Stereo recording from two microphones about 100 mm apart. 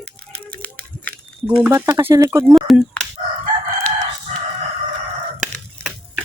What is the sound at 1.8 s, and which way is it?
Speech, 20° right (ahead or behind).